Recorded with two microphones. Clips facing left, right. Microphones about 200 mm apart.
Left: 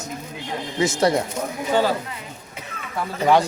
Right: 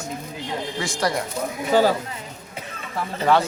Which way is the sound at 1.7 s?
40° right (ahead or behind).